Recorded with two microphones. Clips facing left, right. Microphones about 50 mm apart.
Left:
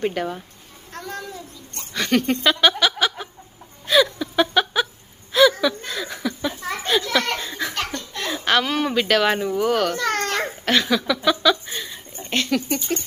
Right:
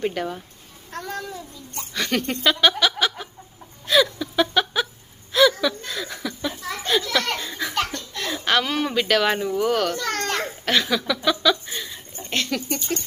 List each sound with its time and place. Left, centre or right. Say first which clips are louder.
0.0 s a child's voice: left 2 dB; centre
0.9 s speech: right 1 dB; centre
1.9 s laughter: left 4 dB; centre
3.8 s a sound: left 1 dB; centre
5.3 s chuckle: left 2 dB; centre
6.7 s children playing: even; centre
7.3 s laughter: left 1 dB; centre
7.9 s laughter: left 1 dB; left
8.3 s a child's voice: left 2 dB; centre
10.2 s a sound: left 2 dB; centre
10.7 s a child's voice: left 2 dB; centre
11.7 s a sound: left 1 dB; left
12.5 s speech: left 3 dB; left